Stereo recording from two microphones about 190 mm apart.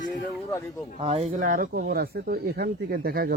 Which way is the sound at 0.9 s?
30° right (ahead or behind).